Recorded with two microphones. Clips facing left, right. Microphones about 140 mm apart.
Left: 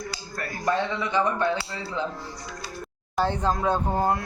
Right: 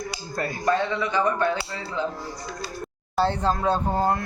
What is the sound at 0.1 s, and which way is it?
Speech, 25° right (ahead or behind).